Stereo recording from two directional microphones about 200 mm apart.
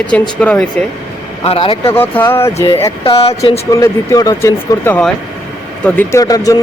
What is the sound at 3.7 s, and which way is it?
Speech, 15° left (ahead or behind).